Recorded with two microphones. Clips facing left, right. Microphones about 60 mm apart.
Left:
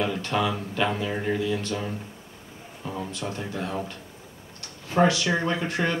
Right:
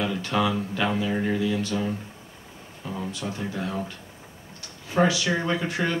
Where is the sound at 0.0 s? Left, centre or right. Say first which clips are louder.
Right 1 dB; centre.